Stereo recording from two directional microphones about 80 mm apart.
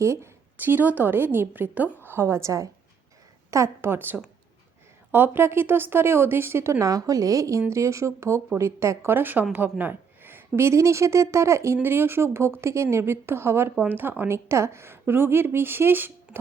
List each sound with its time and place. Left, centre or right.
0.0 s speech: right
0.5 s a woman's voice: right